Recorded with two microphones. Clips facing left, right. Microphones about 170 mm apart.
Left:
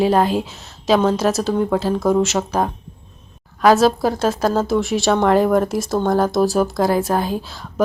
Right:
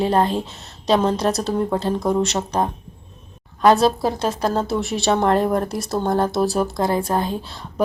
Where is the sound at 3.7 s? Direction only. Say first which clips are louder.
Left 2 dB; centre (ahead or behind).